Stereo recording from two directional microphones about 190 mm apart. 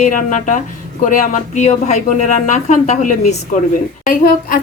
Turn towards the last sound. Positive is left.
turn(degrees=45)  # may be behind; listen again after turning